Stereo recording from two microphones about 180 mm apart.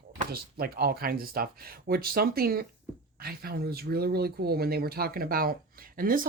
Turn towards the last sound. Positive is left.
turn(degrees=-50)  # may be behind; listen again after turning